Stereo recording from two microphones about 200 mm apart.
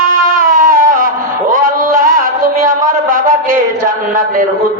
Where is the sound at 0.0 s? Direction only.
45° right (ahead or behind).